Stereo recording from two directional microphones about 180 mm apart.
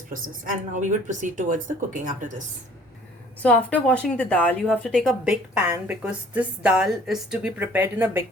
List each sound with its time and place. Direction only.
0.1 s speech: 45° right (ahead or behind)
3.4 s a woman's voice: 5° left (ahead or behind); by 8.2 s 10° right (ahead or behind)